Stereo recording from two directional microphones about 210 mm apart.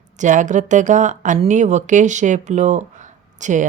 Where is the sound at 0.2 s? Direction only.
35° right (ahead or behind).